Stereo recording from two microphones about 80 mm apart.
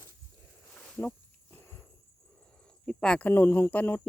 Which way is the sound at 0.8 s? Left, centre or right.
Centre.